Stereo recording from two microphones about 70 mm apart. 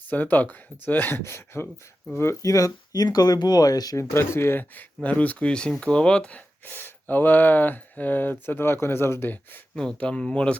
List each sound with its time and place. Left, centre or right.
0.1 s speech: left
2.1 s speech: left
3.9 s speech: left
9.7 s speech: centre